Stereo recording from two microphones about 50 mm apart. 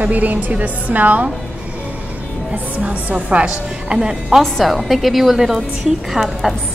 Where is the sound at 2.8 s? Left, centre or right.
Right.